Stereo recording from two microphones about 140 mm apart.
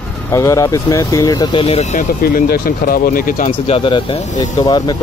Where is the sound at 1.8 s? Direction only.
65° left (ahead or behind); by 3.4 s 80° left.